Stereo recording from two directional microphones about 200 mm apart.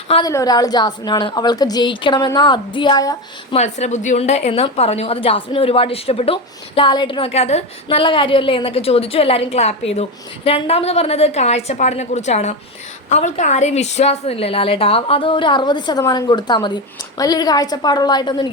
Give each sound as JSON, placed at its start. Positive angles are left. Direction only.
{"t": 0.1, "sound": "a woman's voice", "side_deg": 20}
{"t": 3.5, "sound": "a woman's voice", "side_deg": 35}